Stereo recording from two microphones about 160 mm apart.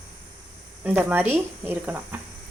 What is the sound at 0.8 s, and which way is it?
Speech, 10° right (ahead or behind).